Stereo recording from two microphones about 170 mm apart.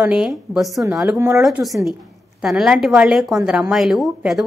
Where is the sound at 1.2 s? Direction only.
20° right (ahead or behind).